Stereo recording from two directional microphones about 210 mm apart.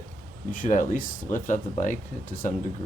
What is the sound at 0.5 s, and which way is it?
Speech, 40° left (ahead or behind).